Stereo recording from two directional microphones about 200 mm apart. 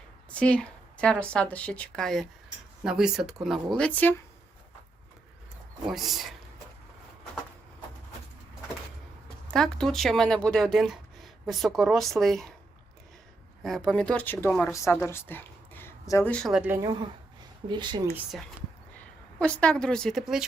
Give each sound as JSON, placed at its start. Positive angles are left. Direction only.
{"t": 0.3, "sound": "speech", "side_deg": 5}
{"t": 5.9, "sound": "speech", "side_deg": 0}
{"t": 9.5, "sound": "speech", "side_deg": 5}
{"t": 13.6, "sound": "speech", "side_deg": 0}
{"t": 17.7, "sound": "speech", "side_deg": -20}
{"t": 19.4, "sound": "speech", "side_deg": 5}